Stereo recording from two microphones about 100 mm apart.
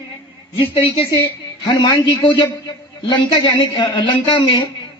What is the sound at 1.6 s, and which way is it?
A man's voice, 45° left (ahead or behind).